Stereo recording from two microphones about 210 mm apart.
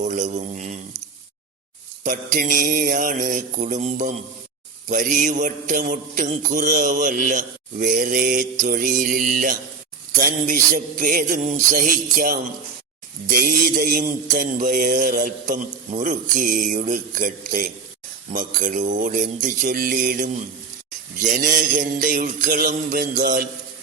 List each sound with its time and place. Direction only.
0.0 s a man's voice: 35° right (ahead or behind)
2.0 s a man's voice: 40° right (ahead or behind)
13.2 s music: 45° right (ahead or behind)
14.3 s a man's voice: 40° right (ahead or behind)
21.2 s music: 40° right (ahead or behind)